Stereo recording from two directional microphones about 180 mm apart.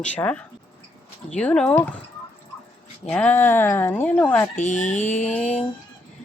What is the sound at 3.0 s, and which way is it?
Speech, 5° left (ahead or behind).